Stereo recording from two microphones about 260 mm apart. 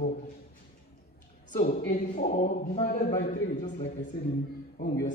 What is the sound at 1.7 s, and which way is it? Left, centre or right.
A man's voice, left.